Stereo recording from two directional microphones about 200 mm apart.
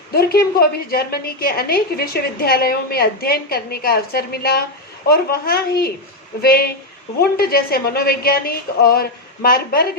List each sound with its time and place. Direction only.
0.1 s a woman's voice: 50° left (ahead or behind)